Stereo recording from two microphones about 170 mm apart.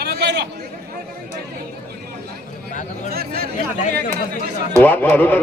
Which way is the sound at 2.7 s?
45° left (ahead or behind).